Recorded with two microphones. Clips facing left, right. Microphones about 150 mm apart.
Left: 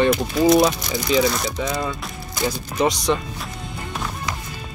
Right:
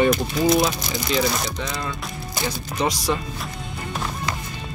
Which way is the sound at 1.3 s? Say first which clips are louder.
Left 2 dB; centre (ahead or behind).